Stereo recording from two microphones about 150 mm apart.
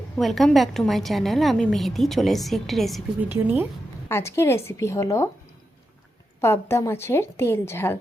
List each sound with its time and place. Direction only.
0.2 s a woman's voice: centre (ahead or behind)
3.2 s speech: 15° right (ahead or behind)
4.1 s a woman's voice: 15° left (ahead or behind)
6.4 s a woman's voice: 15° left (ahead or behind)